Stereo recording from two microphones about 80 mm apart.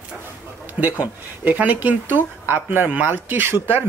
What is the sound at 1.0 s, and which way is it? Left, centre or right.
Speech, right.